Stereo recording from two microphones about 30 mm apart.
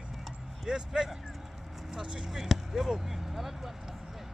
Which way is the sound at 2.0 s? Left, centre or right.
Right.